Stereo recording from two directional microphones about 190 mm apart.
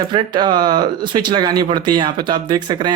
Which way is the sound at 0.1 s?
25° right (ahead or behind).